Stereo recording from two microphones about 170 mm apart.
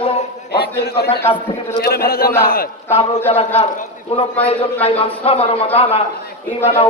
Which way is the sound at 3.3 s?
35° left (ahead or behind).